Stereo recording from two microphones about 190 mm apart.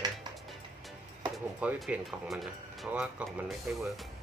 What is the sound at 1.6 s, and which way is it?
Speech, 5° right (ahead or behind).